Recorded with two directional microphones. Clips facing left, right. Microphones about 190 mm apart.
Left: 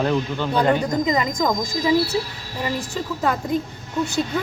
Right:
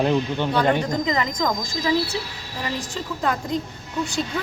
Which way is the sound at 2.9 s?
5° left (ahead or behind).